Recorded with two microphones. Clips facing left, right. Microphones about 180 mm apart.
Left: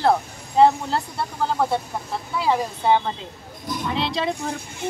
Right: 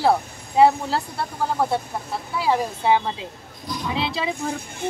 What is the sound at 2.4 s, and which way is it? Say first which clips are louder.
A woman's voice: even; 5° right (ahead or behind).